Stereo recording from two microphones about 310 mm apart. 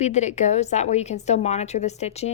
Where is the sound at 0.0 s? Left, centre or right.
Left.